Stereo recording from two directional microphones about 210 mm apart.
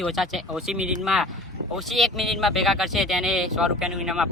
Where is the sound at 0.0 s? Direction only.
Centre (ahead or behind).